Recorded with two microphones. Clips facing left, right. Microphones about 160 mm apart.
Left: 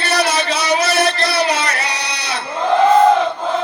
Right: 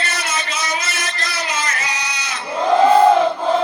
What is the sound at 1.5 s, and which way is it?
Music, 70° left (ahead or behind).